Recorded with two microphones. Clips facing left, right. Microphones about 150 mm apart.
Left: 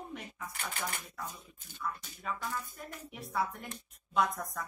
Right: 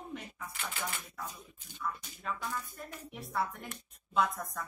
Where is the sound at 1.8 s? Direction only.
5° left (ahead or behind).